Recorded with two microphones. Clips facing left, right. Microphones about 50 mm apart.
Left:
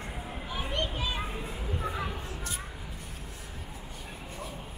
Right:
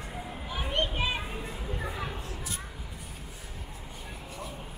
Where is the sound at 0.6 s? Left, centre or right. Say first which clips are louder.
Right 4 dB; centre.